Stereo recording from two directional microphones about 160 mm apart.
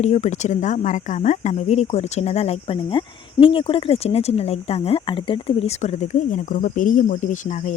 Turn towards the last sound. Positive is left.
turn(degrees=50)  # may be behind; listen again after turning